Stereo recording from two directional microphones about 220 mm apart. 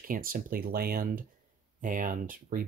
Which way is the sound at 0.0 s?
40° right (ahead or behind).